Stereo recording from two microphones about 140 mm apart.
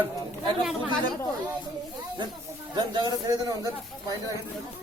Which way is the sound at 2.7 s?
30° right (ahead or behind).